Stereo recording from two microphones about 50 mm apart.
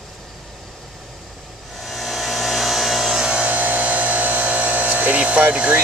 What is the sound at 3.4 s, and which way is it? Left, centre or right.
Electric toothbrush, right.